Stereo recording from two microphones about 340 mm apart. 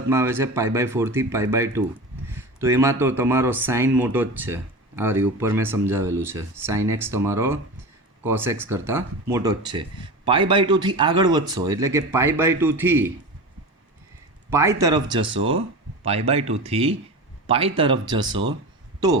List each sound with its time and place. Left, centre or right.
0.1 s speech: centre
14.5 s speech: centre
17.4 s a sound: centre
17.7 s speech: centre